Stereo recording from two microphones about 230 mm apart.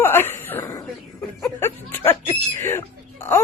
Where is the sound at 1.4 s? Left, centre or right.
Centre.